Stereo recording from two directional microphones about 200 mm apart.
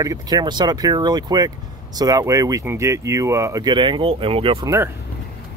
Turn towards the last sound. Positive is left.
turn(degrees=-15)  # may be behind; listen again after turning